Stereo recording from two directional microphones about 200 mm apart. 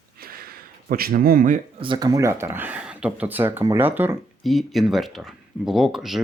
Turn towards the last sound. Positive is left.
turn(degrees=0)  # may be behind; listen again after turning